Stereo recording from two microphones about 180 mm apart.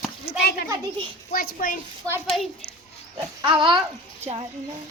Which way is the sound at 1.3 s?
55° left (ahead or behind).